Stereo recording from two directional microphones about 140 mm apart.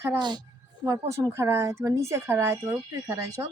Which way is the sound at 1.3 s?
20° right (ahead or behind).